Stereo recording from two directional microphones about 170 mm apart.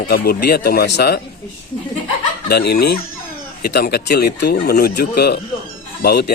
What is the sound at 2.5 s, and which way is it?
Speech, 70° left (ahead or behind).